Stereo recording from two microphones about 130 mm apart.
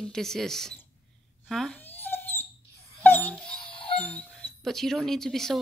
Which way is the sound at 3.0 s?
10° left (ahead or behind).